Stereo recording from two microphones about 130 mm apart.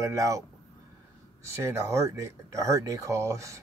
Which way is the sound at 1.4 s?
20° right (ahead or behind).